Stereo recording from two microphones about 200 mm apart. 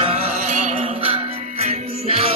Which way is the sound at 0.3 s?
45° right (ahead or behind).